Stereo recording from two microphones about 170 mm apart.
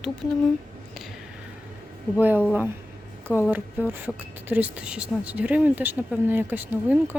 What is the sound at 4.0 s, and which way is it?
Speech, 10° right (ahead or behind).